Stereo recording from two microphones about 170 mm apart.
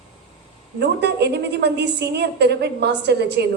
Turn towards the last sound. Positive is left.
turn(degrees=-80)